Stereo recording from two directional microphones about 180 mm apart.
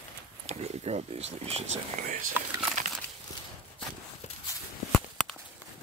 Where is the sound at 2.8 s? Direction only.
45° right (ahead or behind).